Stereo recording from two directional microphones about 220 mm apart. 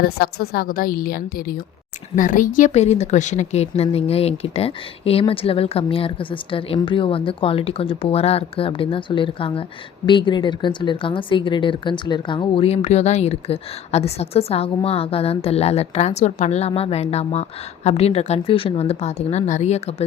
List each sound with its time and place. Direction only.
0.0 s a woman's voice: 45° left (ahead or behind); by 20.1 s 30° left (ahead or behind)